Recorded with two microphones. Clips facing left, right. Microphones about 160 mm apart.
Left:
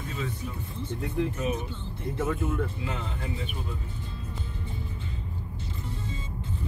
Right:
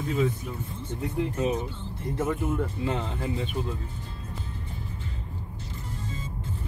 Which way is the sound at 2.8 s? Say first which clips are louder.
Right 5 dB; 35° right (ahead or behind).